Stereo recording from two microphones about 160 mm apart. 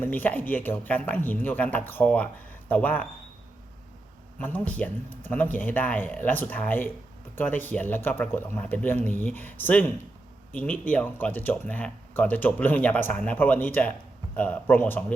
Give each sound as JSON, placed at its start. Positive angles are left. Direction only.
{"t": 0.0, "sound": "speech", "side_deg": 10}
{"t": 4.4, "sound": "speech", "side_deg": 10}